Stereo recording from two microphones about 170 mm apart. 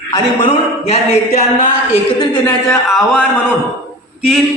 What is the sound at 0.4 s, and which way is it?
Speech, 35° left (ahead or behind).